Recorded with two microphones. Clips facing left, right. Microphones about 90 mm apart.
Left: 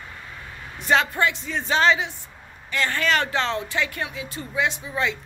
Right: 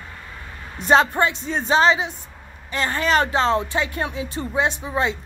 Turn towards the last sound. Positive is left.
turn(degrees=-30)  # may be behind; listen again after turning